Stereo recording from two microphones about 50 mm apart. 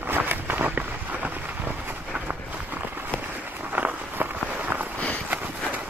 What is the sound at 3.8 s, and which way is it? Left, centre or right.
Walk, right.